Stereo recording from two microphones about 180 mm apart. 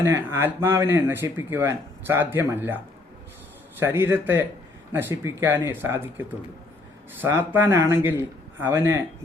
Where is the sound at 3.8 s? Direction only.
10° right (ahead or behind).